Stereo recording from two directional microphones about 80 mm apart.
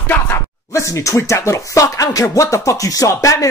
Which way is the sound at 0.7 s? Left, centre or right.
Left.